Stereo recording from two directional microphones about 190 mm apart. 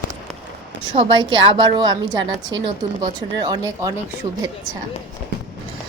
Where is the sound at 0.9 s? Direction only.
30° right (ahead or behind).